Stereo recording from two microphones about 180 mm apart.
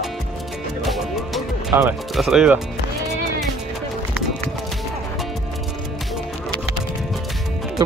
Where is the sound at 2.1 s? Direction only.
Centre (ahead or behind).